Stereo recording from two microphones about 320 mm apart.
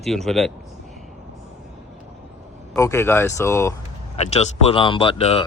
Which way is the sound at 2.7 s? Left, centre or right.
Centre.